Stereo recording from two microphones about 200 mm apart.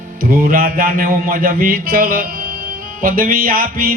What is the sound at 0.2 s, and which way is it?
Music, 45° right (ahead or behind).